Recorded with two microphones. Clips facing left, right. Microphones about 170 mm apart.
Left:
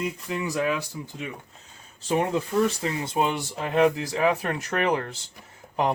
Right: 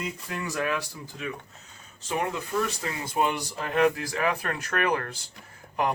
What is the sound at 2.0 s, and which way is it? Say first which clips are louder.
Speech: left 5 dB; 30° left (ahead or behind).